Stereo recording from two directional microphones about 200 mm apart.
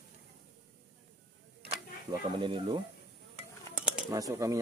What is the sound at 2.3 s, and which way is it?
Speech, 25° right (ahead or behind).